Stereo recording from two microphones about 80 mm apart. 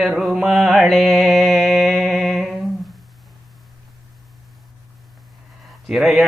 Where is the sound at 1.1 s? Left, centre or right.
Centre.